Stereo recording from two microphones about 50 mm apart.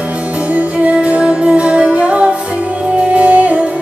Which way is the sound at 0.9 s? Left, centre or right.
Centre.